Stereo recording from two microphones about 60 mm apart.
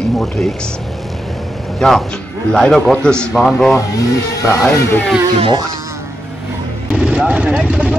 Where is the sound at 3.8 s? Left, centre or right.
Left.